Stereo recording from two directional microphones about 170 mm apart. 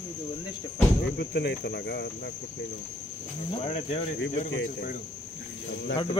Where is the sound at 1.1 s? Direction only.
80° left.